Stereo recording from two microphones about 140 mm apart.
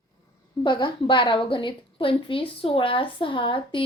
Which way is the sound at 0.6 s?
35° left (ahead or behind).